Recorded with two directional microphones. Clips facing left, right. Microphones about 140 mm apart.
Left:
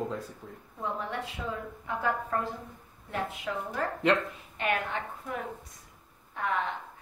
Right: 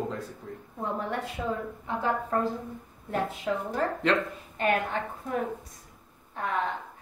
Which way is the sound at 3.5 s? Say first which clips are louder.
Right 5 dB; 30° right (ahead or behind).